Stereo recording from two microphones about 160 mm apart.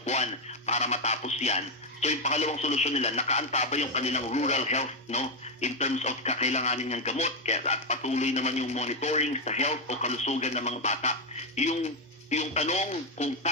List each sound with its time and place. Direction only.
0.0 s speech: 45° left (ahead or behind)